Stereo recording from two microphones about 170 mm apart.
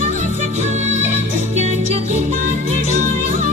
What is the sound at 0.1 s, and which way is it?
Music, 45° right (ahead or behind).